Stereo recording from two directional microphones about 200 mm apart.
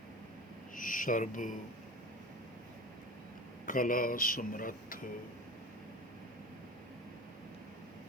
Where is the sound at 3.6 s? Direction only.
45° left (ahead or behind).